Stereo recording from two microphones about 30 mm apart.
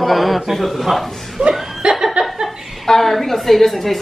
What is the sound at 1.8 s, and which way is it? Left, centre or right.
Laughter, right.